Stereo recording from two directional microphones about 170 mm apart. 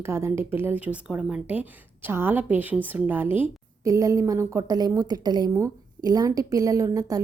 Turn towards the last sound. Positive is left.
turn(degrees=-20)  # may be behind; listen again after turning